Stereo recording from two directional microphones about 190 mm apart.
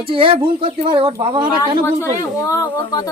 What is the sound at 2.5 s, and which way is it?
Speech, 20° left (ahead or behind).